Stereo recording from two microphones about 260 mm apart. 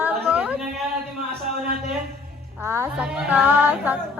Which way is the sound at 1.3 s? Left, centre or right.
Right.